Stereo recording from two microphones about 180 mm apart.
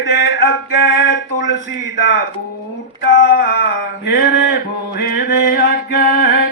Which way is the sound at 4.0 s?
65° left (ahead or behind).